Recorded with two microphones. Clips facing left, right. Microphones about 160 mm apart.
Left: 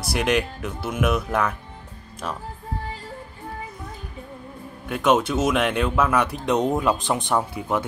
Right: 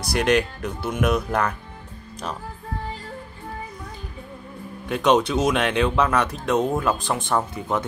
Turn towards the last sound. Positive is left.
turn(degrees=10)  # may be behind; listen again after turning